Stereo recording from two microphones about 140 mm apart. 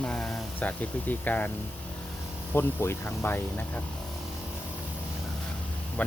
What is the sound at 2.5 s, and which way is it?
Speech, 15° left (ahead or behind).